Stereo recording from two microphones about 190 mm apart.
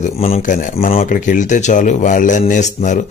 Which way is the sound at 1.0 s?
45° left (ahead or behind).